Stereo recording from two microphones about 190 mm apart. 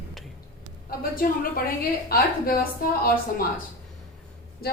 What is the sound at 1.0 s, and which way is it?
A woman's voice, 50° left (ahead or behind).